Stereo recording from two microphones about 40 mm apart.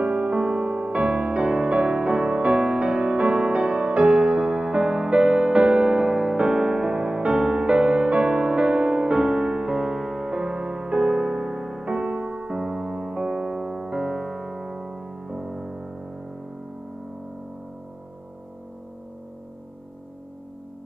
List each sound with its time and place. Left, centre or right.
0.0 s music: right